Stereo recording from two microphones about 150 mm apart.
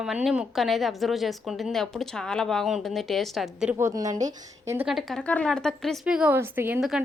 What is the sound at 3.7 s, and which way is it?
A woman's voice, 20° right (ahead or behind).